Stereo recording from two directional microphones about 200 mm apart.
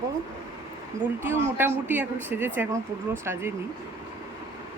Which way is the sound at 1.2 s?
10° right (ahead or behind).